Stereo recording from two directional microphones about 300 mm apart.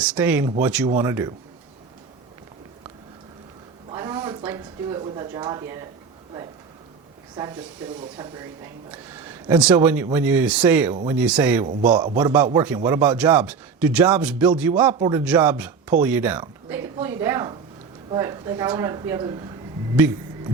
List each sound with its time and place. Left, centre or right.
0.0 s a man's voice: centre
3.8 s a sound: centre
8.2 s a man's voice: centre
11.6 s a man's voice: right
12.1 s a man's voice: centre
20.0 s a sound: centre